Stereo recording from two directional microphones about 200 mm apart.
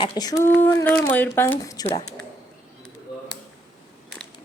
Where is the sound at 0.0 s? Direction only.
20° left (ahead or behind).